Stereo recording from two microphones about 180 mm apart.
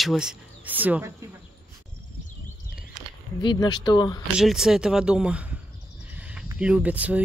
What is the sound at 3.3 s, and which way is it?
Speech, 25° left (ahead or behind).